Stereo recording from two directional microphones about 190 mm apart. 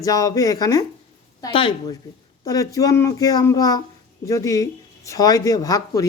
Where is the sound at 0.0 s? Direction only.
20° left (ahead or behind).